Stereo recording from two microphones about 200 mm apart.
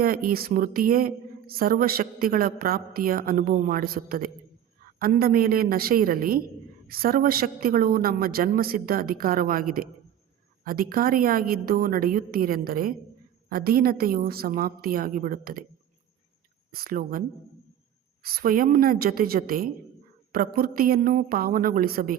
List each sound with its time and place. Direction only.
0.0 s a woman's voice: 45° right (ahead or behind)
16.7 s a woman's voice: 45° right (ahead or behind)